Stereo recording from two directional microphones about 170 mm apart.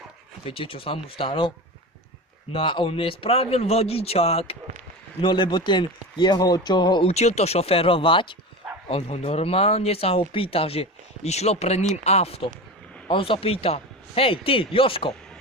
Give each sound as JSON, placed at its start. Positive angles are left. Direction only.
{"t": 0.4, "sound": "a man's voice", "side_deg": 30}
{"t": 7.1, "sound": "speech", "side_deg": 40}